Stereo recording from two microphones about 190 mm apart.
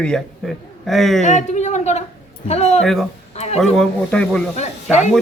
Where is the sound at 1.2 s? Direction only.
40° left (ahead or behind).